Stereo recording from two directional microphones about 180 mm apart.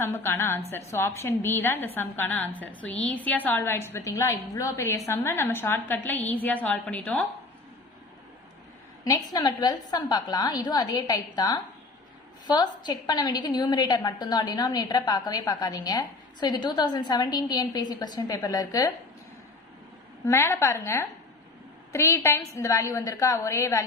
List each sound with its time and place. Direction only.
0.0 s a woman's voice: 10° left (ahead or behind)
9.0 s a woman's voice: 20° left (ahead or behind)
20.2 s a woman's voice: 15° left (ahead or behind)